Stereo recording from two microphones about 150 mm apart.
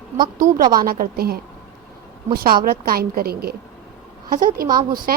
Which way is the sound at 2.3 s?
75° right (ahead or behind).